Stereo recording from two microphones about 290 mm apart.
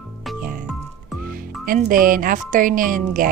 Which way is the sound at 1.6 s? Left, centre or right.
Right.